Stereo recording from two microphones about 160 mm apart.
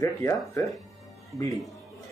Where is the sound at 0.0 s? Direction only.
20° left (ahead or behind).